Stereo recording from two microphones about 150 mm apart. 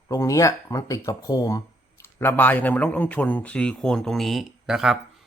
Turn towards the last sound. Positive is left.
turn(degrees=-5)  # may be behind; listen again after turning